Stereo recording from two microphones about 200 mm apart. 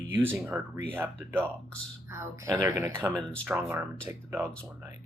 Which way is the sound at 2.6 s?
15° right (ahead or behind).